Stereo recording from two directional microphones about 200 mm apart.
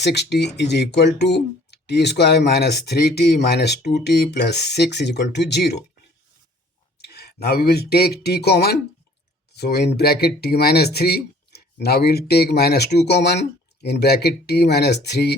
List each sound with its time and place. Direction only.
0.0 s speech: 55° left (ahead or behind)
7.0 s speech: 55° left (ahead or behind)